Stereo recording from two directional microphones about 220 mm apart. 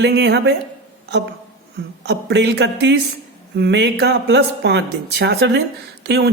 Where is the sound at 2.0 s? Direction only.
50° right (ahead or behind).